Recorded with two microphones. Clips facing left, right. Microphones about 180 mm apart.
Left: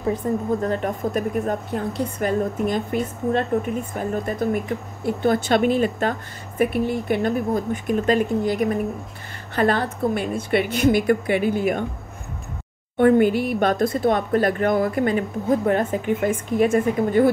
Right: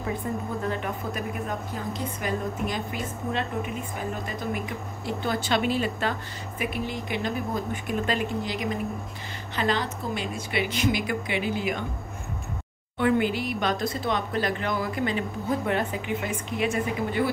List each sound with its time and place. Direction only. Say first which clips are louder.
0.0 s speech: left 7 dB; 40° left (ahead or behind)
1.7 s a woman's voice: left 7 dB; 60° left (ahead or behind)
12.9 s speech: left 8 dB; 50° left (ahead or behind)